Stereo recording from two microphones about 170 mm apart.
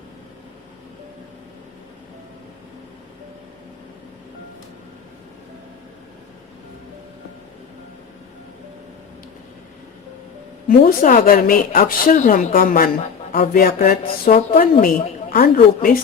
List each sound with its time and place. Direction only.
10.7 s a woman's voice: 55° left (ahead or behind)